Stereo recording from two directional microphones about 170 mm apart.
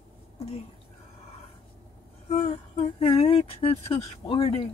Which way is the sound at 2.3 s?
35° left (ahead or behind).